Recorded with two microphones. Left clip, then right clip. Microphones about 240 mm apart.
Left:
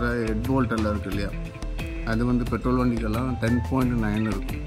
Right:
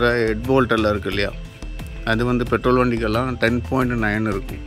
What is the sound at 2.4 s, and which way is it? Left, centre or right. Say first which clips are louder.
Speech: right 8 dB; right.